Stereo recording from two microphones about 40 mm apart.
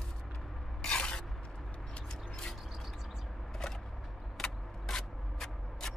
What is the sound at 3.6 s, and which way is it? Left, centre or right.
Vehicle, centre.